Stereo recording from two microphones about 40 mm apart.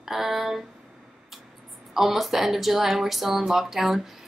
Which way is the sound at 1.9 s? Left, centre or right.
Centre.